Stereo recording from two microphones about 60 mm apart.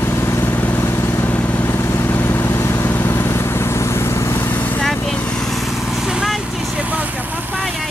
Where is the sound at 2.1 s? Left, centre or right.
Left.